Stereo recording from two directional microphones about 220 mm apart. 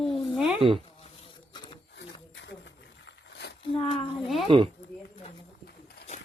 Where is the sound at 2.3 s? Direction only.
55° left (ahead or behind).